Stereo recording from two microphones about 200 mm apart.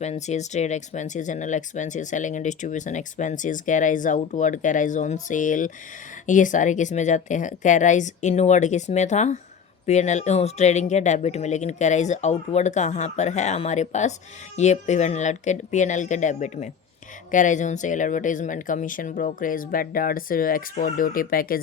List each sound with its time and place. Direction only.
0.0 s speech: 35° left (ahead or behind)